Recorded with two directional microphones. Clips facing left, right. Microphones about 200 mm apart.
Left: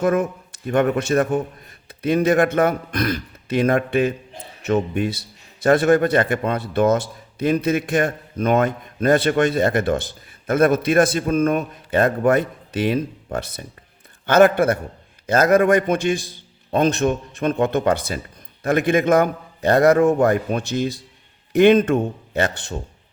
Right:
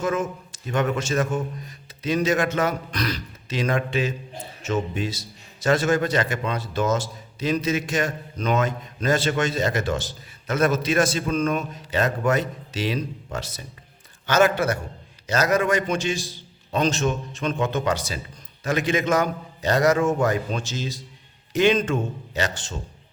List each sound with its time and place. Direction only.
0.0 s a man's voice: 60° left (ahead or behind)